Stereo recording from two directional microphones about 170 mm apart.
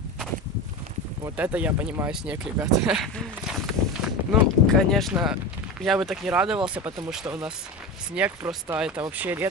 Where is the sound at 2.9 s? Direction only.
Centre (ahead or behind).